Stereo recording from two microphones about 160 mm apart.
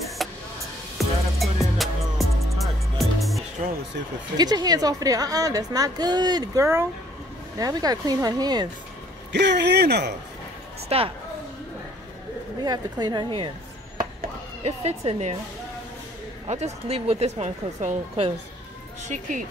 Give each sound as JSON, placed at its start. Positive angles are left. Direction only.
{"t": 0.2, "sound": "music", "side_deg": 0}
{"t": 4.4, "sound": "a woman's voice", "side_deg": -25}
{"t": 9.3, "sound": "speech", "side_deg": -90}
{"t": 10.9, "sound": "a woman's voice", "side_deg": -35}
{"t": 12.6, "sound": "a woman's voice", "side_deg": -25}
{"t": 14.6, "sound": "speech", "side_deg": -40}
{"t": 16.4, "sound": "speech", "side_deg": -45}